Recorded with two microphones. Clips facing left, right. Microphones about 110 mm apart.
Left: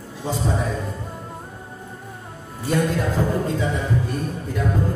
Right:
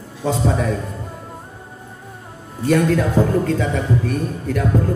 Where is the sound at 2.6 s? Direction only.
70° right (ahead or behind).